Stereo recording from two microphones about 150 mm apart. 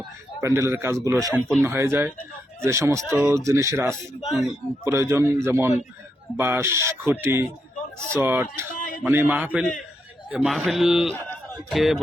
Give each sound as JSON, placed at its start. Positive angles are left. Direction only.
{"t": 0.4, "sound": "a man's voice", "side_deg": -20}
{"t": 1.3, "sound": "a man's voice", "side_deg": 0}
{"t": 1.6, "sound": "a man's voice", "side_deg": -15}
{"t": 3.1, "sound": "a man's voice", "side_deg": -5}
{"t": 3.3, "sound": "speech", "side_deg": -20}
{"t": 4.2, "sound": "a man's voice", "side_deg": 0}
{"t": 4.8, "sound": "a man's voice", "side_deg": -20}
{"t": 8.7, "sound": "a sound", "side_deg": 65}
{"t": 9.0, "sound": "a man's voice", "side_deg": -10}